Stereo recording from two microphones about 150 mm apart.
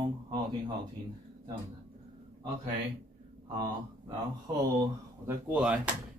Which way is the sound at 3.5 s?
30° right (ahead or behind).